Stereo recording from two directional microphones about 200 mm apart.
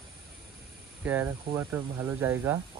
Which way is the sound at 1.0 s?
10° right (ahead or behind).